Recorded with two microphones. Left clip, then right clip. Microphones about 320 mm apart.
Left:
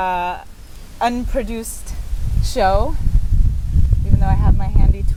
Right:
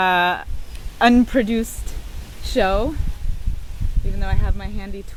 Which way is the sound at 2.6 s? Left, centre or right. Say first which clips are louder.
Left 2 dB; right.